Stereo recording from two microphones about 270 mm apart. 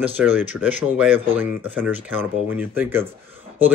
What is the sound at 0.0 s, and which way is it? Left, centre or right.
A man's voice, centre.